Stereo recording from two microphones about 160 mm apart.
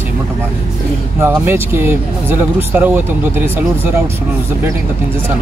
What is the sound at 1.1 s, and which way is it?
Speech, 15° right (ahead or behind).